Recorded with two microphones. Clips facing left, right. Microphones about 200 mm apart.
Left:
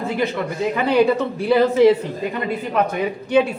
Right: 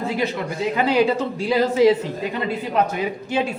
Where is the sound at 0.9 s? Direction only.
60° left (ahead or behind).